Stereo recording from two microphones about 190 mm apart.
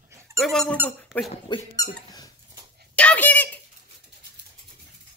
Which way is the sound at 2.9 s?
10° left (ahead or behind).